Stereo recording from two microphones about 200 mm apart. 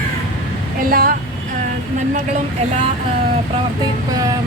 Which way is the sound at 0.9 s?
45° right (ahead or behind).